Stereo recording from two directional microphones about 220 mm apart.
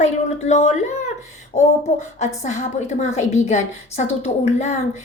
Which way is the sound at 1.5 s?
30° left (ahead or behind).